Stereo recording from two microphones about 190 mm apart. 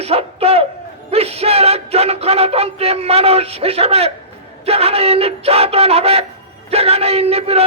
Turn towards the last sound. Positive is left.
turn(degrees=-30)  # may be behind; listen again after turning